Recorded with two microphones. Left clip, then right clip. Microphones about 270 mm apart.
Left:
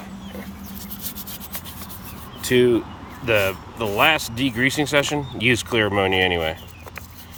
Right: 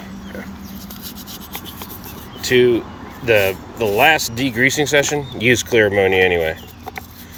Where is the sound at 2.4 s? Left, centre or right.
Centre.